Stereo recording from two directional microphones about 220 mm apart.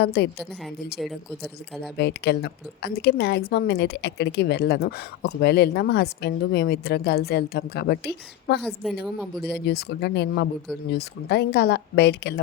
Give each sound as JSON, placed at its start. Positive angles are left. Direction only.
{"t": 0.0, "sound": "a woman's voice", "side_deg": 50}
{"t": 2.0, "sound": "a woman's voice", "side_deg": 50}
{"t": 8.6, "sound": "a woman's voice", "side_deg": 0}
{"t": 9.4, "sound": "a woman's voice", "side_deg": 50}